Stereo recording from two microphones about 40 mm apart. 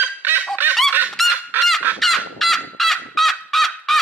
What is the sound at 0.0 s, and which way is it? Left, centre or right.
Fowl, right.